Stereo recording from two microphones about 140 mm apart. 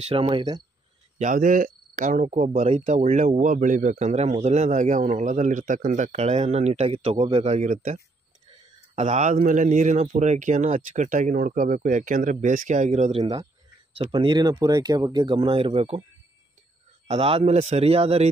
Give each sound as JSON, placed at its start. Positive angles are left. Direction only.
{"t": 0.0, "sound": "speech", "side_deg": -45}
{"t": 1.1, "sound": "a man's voice", "side_deg": -65}
{"t": 2.8, "sound": "a man's voice", "side_deg": -55}
{"t": 13.1, "sound": "speech", "side_deg": -30}
{"t": 13.9, "sound": "speech", "side_deg": -45}
{"t": 17.1, "sound": "speech", "side_deg": -45}